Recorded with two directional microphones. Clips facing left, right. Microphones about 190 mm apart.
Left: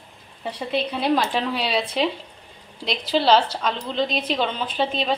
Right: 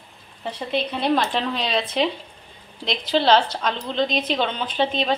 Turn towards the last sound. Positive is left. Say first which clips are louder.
# right 1 dB
turn(degrees=5)  # may be behind; listen again after turning